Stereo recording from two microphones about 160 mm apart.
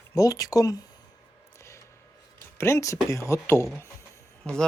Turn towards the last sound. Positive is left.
turn(degrees=5)  # may be behind; listen again after turning